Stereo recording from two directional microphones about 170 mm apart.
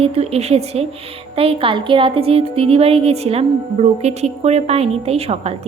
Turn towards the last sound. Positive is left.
turn(degrees=-35)  # may be behind; listen again after turning